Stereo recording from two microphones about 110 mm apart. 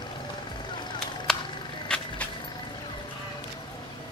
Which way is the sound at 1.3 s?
5° left (ahead or behind).